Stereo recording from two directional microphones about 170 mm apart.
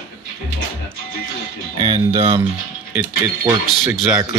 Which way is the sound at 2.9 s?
10° right (ahead or behind).